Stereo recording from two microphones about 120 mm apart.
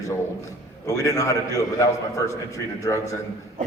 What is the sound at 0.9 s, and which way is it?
A man's voice, 25° left (ahead or behind).